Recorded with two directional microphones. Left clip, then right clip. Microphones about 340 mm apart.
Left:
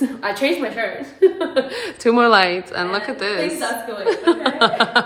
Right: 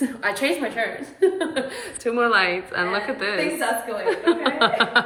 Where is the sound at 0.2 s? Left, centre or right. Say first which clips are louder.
Left 2 dB; centre.